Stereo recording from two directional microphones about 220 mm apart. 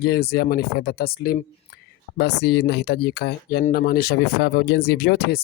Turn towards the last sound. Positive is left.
turn(degrees=45)  # may be behind; listen again after turning